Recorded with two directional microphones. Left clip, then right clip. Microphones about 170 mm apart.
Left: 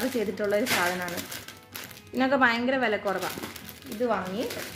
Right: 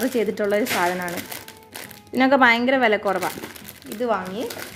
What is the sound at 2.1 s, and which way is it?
A woman's voice, 60° right (ahead or behind).